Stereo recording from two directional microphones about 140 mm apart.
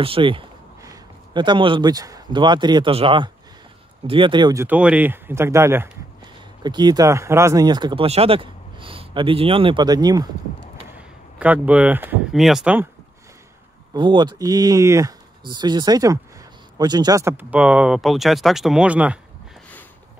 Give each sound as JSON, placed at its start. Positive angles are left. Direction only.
{"t": 0.0, "sound": "speech", "side_deg": -40}
{"t": 4.6, "sound": "speech", "side_deg": -10}
{"t": 6.6, "sound": "speech", "side_deg": -30}
{"t": 11.0, "sound": "speech", "side_deg": -10}
{"t": 12.3, "sound": "speech", "side_deg": 0}
{"t": 13.9, "sound": "speech", "side_deg": -35}
{"t": 17.2, "sound": "speech", "side_deg": -15}